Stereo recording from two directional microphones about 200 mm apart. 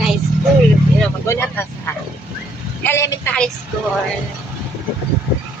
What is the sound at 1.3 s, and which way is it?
Speech, 10° left (ahead or behind).